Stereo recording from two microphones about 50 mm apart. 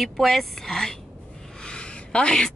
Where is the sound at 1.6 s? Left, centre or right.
Centre.